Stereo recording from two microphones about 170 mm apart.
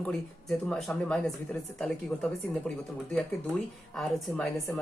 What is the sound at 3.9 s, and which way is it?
Speech, centre (ahead or behind).